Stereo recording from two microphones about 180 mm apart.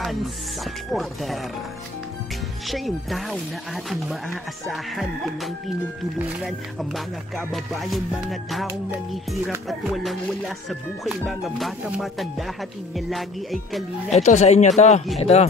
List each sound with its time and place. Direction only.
0.9 s speech: centre (ahead or behind)
2.7 s speech: centre (ahead or behind)
9.7 s speech: centre (ahead or behind)
14.1 s speech: 40° left (ahead or behind)